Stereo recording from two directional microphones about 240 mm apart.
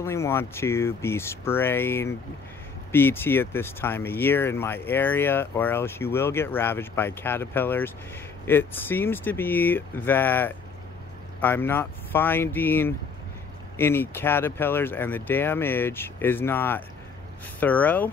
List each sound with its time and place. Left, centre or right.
0.0 s speech: centre